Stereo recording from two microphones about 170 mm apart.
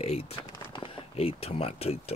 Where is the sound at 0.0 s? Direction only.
40° left (ahead or behind).